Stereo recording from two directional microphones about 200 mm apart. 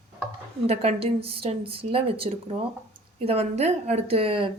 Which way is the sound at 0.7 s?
30° right (ahead or behind).